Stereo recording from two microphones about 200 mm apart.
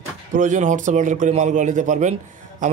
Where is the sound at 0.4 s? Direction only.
40° right (ahead or behind).